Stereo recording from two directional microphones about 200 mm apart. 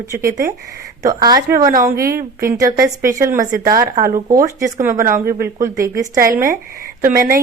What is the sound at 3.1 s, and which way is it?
Speech, 15° right (ahead or behind).